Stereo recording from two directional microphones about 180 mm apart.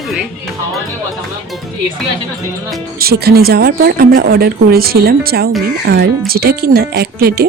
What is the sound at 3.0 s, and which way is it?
Speech, 60° right (ahead or behind).